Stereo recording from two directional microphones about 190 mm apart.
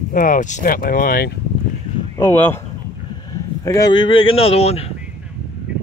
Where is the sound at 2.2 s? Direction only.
10° left (ahead or behind).